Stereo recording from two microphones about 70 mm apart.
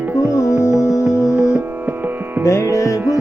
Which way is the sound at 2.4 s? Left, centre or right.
Left.